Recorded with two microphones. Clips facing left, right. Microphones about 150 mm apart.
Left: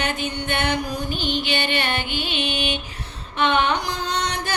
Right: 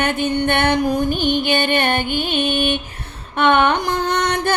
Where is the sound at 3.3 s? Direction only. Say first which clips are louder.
Right 5 dB; 55° right (ahead or behind).